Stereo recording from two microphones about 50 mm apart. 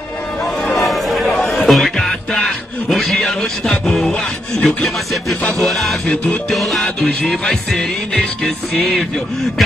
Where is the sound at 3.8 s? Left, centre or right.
Centre.